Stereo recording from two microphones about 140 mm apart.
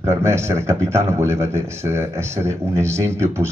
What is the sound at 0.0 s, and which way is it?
A man's voice, 20° right (ahead or behind).